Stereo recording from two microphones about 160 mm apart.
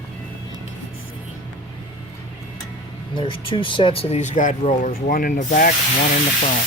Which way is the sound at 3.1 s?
30° left (ahead or behind).